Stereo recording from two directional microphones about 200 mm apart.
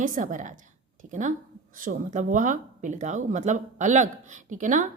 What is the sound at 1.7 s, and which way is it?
A woman's voice, 40° right (ahead or behind).